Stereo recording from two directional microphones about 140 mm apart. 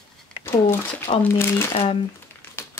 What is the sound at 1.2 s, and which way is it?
Speech, 15° left (ahead or behind).